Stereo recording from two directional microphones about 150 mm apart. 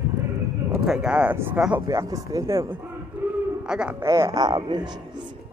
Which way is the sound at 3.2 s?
10° right (ahead or behind).